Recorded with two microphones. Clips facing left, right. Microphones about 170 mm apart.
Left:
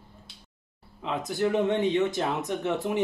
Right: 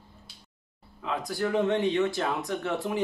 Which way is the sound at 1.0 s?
20° left (ahead or behind).